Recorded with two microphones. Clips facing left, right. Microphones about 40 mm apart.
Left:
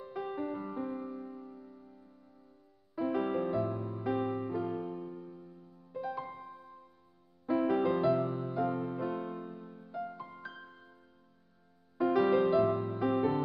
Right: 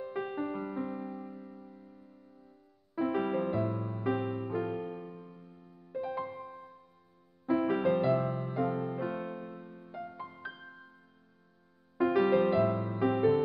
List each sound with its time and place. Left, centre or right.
0.0 s music: right
4.5 s music: right
5.9 s music: centre
7.4 s music: centre
12.0 s music: centre